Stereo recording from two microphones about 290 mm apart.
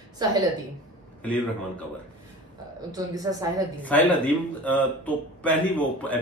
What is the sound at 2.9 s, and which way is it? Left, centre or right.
Speech, centre.